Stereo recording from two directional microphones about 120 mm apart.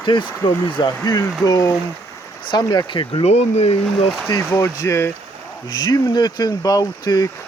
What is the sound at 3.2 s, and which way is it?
Speech, 65° left (ahead or behind).